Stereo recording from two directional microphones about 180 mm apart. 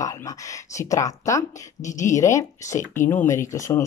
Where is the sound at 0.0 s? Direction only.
20° left (ahead or behind).